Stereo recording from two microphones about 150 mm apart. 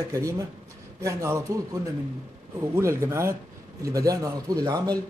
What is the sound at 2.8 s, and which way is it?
A man's voice, 20° right (ahead or behind).